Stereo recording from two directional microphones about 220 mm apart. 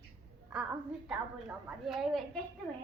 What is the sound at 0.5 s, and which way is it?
A woman's voice, 5° right (ahead or behind).